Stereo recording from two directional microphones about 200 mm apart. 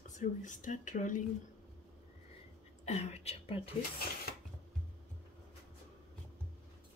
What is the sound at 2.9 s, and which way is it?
Speech, 35° left (ahead or behind).